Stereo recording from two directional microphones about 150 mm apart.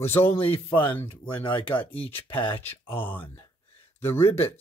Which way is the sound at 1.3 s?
35° left (ahead or behind).